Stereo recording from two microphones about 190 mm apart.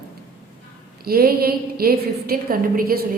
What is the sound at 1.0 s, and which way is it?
A woman's voice, 50° right (ahead or behind).